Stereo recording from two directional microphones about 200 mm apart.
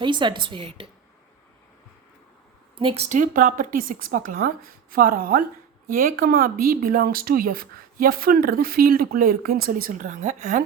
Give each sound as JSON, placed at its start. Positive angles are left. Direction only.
{"t": 0.0, "sound": "a woman's voice", "side_deg": -25}
{"t": 2.7, "sound": "speech", "side_deg": -30}